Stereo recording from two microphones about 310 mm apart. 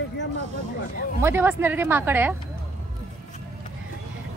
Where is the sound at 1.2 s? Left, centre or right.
Centre.